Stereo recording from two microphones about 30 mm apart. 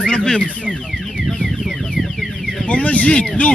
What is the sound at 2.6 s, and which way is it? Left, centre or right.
Speech, left.